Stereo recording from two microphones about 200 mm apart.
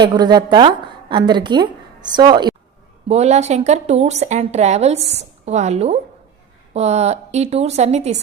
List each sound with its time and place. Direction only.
0.0 s a woman's voice: 20° right (ahead or behind)
3.1 s a woman's voice: 35° right (ahead or behind)